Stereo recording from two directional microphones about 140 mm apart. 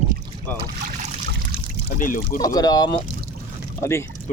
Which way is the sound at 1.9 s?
75° left (ahead or behind).